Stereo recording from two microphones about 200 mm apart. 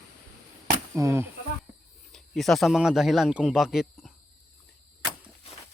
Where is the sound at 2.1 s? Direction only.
Centre (ahead or behind).